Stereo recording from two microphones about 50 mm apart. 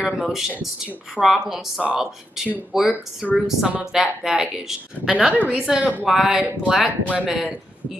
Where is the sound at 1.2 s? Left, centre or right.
Right.